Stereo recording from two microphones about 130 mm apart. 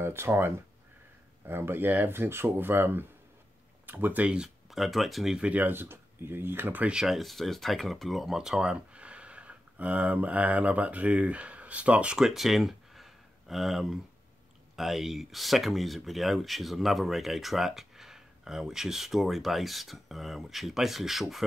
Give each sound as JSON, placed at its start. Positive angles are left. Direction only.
{"t": 0.0, "sound": "speech", "side_deg": -15}
{"t": 1.5, "sound": "speech", "side_deg": -15}